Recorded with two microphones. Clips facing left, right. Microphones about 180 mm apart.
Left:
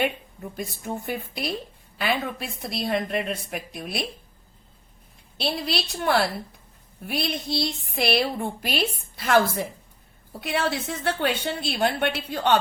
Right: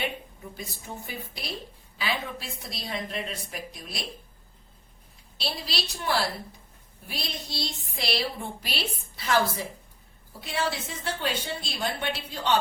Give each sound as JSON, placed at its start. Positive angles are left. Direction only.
{"t": 0.5, "sound": "a woman's voice", "side_deg": 55}
{"t": 5.4, "sound": "a woman's voice", "side_deg": 60}